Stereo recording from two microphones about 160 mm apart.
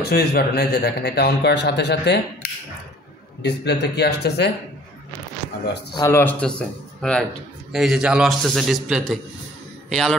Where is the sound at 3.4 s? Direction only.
90° left.